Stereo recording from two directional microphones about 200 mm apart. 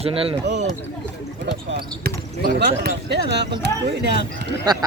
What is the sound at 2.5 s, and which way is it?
Speech, 55° right (ahead or behind).